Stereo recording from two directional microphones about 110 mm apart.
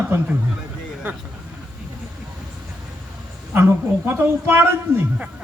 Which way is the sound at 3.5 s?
20° right (ahead or behind).